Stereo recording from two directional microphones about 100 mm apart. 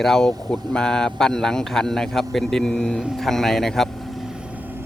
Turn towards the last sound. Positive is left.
turn(degrees=5)  # may be behind; listen again after turning